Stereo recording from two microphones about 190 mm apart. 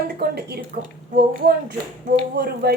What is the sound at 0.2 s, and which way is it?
Speech, 55° right (ahead or behind).